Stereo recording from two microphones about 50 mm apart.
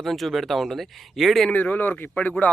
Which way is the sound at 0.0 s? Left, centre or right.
Centre.